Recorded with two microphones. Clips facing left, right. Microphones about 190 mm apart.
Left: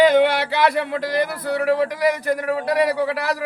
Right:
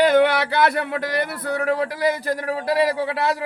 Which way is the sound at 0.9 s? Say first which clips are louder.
Left 2 dB; 60° right (ahead or behind).